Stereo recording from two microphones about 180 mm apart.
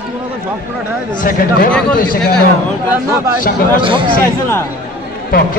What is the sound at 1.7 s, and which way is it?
Speech, 5° left (ahead or behind).